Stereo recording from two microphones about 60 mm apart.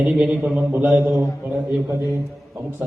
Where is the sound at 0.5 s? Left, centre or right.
Right.